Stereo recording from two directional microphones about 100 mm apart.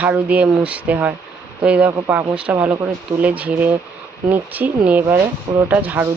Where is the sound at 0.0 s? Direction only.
15° right (ahead or behind).